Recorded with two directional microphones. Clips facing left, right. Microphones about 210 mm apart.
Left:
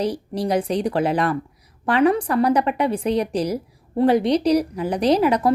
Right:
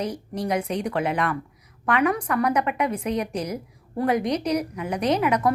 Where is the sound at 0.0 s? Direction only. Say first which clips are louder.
Left 5 dB; 35° left (ahead or behind).